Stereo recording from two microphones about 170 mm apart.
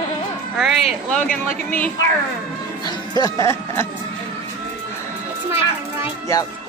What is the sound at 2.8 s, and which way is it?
Speech, 20° left (ahead or behind).